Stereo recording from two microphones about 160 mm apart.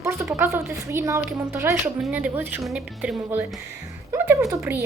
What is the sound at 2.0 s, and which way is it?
A woman's voice, 5° right (ahead or behind).